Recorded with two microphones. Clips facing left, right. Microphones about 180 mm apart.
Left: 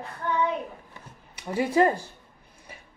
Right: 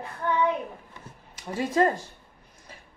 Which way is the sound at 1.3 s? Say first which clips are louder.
Left 3 dB; 65° left (ahead or behind).